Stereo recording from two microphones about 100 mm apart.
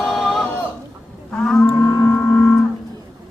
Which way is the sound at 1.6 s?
30° left (ahead or behind).